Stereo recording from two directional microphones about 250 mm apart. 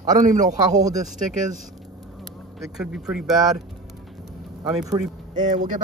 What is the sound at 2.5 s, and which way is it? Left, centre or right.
Speech, centre.